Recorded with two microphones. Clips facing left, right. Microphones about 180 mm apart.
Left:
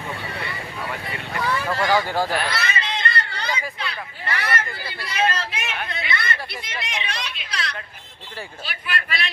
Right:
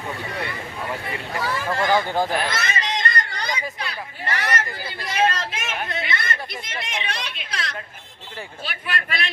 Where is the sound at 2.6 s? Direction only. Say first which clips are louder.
Right 1 dB; 45° right (ahead or behind).